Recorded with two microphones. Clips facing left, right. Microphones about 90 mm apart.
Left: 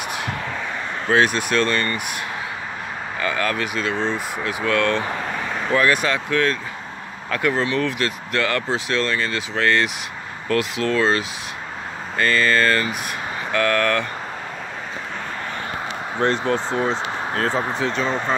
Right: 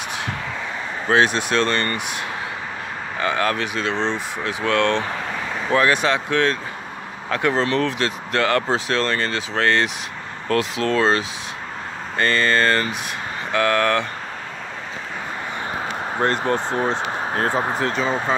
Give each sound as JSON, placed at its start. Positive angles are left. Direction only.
{"t": 1.0, "sound": "speech", "side_deg": -25}
{"t": 3.2, "sound": "speech", "side_deg": -30}
{"t": 5.0, "sound": "vehicle", "side_deg": 5}
{"t": 5.7, "sound": "speech", "side_deg": -25}
{"t": 16.2, "sound": "speech", "side_deg": -10}
{"t": 17.5, "sound": "speech", "side_deg": -25}
{"t": 17.8, "sound": "speech", "side_deg": -5}